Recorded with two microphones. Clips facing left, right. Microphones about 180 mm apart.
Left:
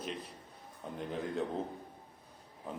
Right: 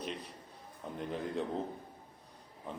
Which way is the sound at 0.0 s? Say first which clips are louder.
Even; centre (ahead or behind).